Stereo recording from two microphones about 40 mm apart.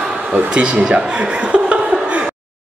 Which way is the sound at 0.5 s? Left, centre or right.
Right.